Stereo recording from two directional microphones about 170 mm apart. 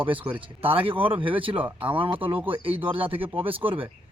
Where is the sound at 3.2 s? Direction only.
10° right (ahead or behind).